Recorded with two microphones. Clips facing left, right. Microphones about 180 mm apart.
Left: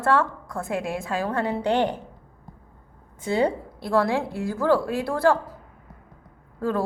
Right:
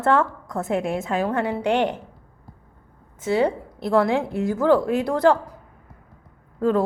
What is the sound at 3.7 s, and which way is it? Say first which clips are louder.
A woman's voice: right 4 dB; 20° right (ahead or behind).